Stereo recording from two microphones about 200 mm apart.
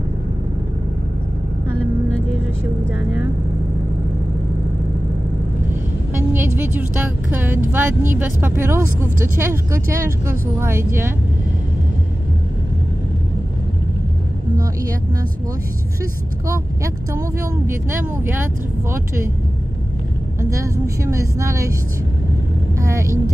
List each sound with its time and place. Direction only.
6.3 s speech: 10° right (ahead or behind)
16.4 s speech: 15° right (ahead or behind)
20.3 s a woman's voice: 15° right (ahead or behind)
22.8 s speech: 15° right (ahead or behind)